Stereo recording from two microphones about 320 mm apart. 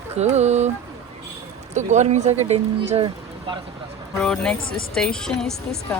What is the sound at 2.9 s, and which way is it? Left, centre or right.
Vehicle, centre.